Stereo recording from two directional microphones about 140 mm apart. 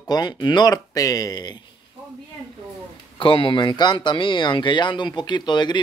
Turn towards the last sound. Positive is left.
turn(degrees=30)  # may be behind; listen again after turning